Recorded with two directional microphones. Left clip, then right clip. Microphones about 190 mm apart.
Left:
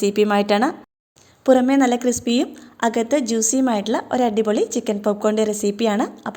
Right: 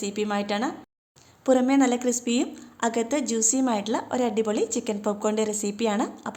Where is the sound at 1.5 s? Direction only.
20° left (ahead or behind).